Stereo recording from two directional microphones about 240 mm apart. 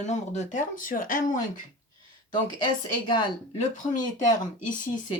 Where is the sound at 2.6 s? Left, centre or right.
Centre.